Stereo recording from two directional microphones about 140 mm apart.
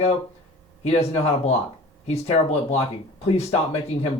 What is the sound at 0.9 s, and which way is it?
Speech, 50° left (ahead or behind).